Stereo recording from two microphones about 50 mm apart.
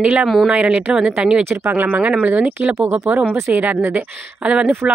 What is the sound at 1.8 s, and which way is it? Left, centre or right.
Speech, right.